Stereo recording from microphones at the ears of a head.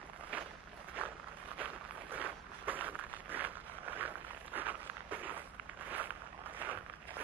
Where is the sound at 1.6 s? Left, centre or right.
Right.